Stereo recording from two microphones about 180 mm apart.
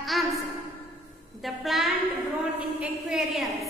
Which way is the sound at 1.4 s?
Centre (ahead or behind).